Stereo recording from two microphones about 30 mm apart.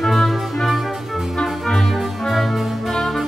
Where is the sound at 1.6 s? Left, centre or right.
Centre.